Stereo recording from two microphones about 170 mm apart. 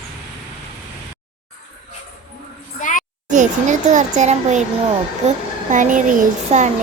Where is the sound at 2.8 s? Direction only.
50° left (ahead or behind).